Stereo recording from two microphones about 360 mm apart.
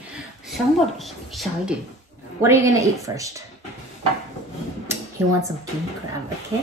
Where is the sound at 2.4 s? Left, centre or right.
Centre.